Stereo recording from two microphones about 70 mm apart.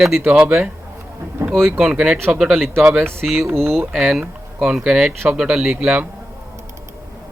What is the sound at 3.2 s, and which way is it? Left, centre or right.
Speech, centre.